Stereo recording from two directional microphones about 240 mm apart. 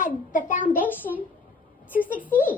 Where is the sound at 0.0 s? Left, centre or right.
Left.